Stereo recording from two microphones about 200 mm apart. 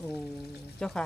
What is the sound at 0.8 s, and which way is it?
Speech, 5° left (ahead or behind).